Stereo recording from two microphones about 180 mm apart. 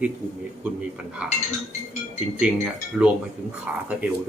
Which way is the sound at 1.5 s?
40° left (ahead or behind).